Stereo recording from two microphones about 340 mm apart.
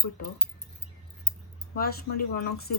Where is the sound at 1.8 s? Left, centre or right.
Left.